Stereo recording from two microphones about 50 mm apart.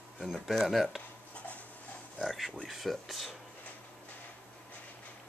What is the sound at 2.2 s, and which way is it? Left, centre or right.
Speech, centre.